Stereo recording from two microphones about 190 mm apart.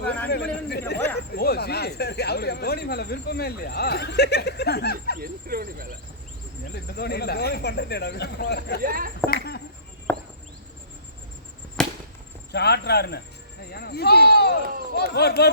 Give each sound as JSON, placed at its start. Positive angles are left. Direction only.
{"t": 0.7, "sound": "speech", "side_deg": 60}
{"t": 5.2, "sound": "speech", "side_deg": -50}
{"t": 6.8, "sound": "speech", "side_deg": 55}
{"t": 8.8, "sound": "speech", "side_deg": -50}
{"t": 9.2, "sound": "a sound", "side_deg": 55}
{"t": 10.1, "sound": "a sound", "side_deg": 10}
{"t": 11.8, "sound": "chop", "side_deg": 5}
{"t": 12.5, "sound": "speech", "side_deg": 60}